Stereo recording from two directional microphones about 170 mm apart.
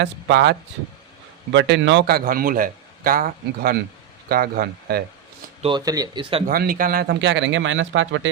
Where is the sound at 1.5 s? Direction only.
90° right; by 5.0 s 65° right (ahead or behind).